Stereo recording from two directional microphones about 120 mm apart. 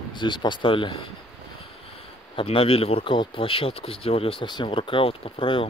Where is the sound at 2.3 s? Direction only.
50° left (ahead or behind).